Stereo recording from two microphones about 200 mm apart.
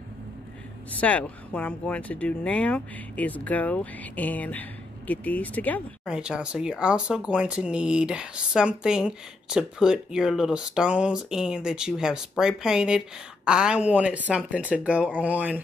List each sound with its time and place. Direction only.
1.0 s speech: 5° left (ahead or behind)
6.0 s speech: 5° right (ahead or behind)